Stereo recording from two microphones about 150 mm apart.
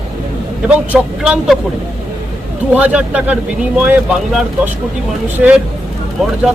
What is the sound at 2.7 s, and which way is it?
Speech, 10° right (ahead or behind).